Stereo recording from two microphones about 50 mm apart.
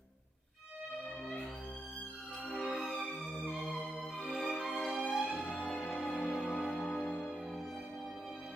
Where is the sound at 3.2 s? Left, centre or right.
Centre.